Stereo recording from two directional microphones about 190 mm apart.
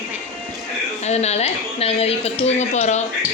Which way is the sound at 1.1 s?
35° left (ahead or behind).